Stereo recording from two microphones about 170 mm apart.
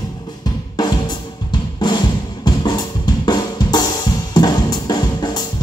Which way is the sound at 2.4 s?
25° left (ahead or behind).